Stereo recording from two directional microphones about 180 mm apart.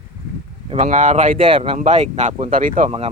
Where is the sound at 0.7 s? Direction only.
40° right (ahead or behind).